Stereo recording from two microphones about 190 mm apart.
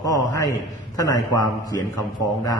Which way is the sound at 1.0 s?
20° left (ahead or behind).